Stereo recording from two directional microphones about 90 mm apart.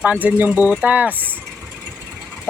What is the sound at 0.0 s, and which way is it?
Speech, 20° right (ahead or behind).